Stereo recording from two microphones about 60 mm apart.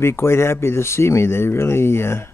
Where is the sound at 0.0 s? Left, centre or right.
Left.